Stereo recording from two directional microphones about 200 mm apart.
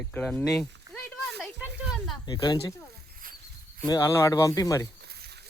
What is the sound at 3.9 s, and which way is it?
Speech, 15° left (ahead or behind).